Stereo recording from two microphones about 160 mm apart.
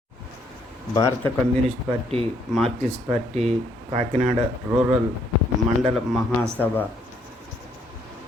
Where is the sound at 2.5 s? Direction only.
Centre (ahead or behind).